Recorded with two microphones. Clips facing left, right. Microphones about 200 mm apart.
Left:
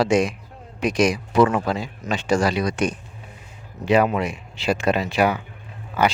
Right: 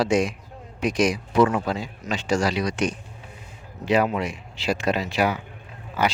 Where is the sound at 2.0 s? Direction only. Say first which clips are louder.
Left 3 dB; 55° left (ahead or behind).